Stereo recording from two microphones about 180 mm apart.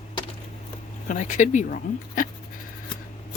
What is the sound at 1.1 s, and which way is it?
Speech, 45° left (ahead or behind).